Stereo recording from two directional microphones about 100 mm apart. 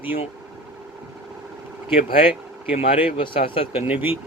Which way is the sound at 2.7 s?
80° left.